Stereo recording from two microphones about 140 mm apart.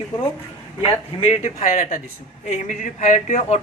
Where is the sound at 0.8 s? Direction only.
45° left (ahead or behind).